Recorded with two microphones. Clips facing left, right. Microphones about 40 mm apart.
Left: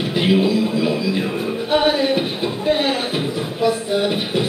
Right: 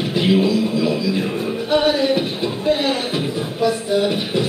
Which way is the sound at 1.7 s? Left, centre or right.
Left.